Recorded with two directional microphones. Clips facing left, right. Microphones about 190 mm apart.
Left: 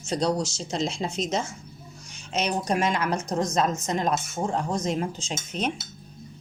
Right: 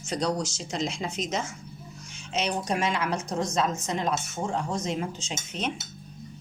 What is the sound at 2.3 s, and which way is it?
A woman's voice, 45° left (ahead or behind).